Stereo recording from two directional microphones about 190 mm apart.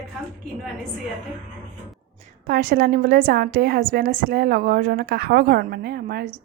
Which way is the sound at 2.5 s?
50° right (ahead or behind).